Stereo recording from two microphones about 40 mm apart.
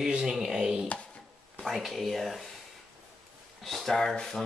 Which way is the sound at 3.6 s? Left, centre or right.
Centre.